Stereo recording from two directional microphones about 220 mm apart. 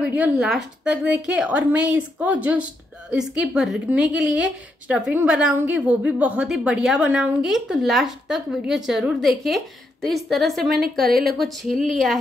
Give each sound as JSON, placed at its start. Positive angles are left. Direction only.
{"t": 0.0, "sound": "a woman's voice", "side_deg": -5}
{"t": 11.1, "sound": "speech", "side_deg": -45}
{"t": 11.3, "sound": "a woman's voice", "side_deg": 0}